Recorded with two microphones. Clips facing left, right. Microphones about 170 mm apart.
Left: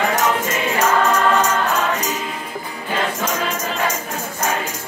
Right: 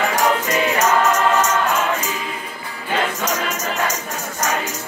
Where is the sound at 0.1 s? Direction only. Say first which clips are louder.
Right 1 dB; 25° left (ahead or behind).